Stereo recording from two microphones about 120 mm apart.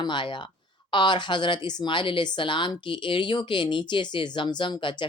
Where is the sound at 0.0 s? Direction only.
40° left (ahead or behind).